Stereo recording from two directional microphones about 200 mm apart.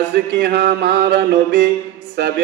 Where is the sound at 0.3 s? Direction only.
60° right (ahead or behind).